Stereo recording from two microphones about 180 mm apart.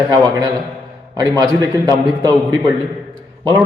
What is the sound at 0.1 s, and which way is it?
A man's voice, 20° right (ahead or behind).